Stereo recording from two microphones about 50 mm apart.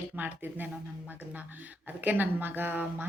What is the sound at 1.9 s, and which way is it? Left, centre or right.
A woman's voice, right.